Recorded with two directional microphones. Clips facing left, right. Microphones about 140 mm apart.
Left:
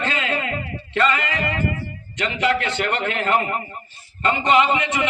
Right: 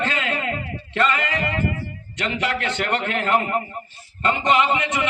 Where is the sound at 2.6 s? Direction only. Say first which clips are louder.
Even; 50° right (ahead or behind).